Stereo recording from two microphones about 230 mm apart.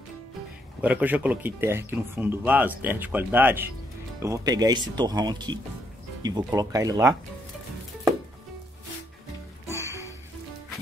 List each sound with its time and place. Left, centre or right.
0.8 s speech: centre
9.7 s music: centre